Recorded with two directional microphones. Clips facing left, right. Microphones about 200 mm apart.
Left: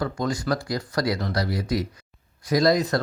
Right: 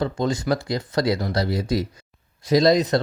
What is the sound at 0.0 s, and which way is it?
Speech, 25° right (ahead or behind).